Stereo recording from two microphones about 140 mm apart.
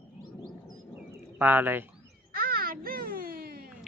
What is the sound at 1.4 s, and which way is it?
Speech, 15° right (ahead or behind).